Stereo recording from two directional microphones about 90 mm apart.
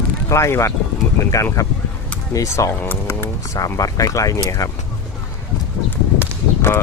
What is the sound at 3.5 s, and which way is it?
Speech, 40° left (ahead or behind).